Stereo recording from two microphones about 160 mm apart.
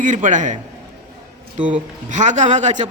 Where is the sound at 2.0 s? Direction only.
50° right (ahead or behind).